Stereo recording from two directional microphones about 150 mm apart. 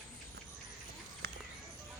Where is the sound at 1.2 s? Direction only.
90° right.